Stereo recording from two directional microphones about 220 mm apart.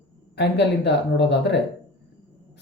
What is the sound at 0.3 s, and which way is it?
Speech, 50° left (ahead or behind).